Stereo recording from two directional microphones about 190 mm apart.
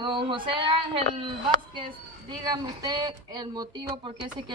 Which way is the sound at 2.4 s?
20° right (ahead or behind).